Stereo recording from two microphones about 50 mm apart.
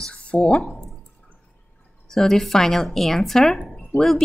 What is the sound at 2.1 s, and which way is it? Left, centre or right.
Speech, centre.